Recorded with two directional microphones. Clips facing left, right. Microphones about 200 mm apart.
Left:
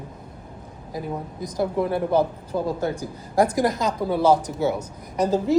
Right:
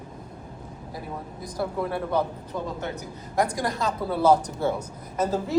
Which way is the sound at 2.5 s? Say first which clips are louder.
Left 7 dB; 35° left (ahead or behind).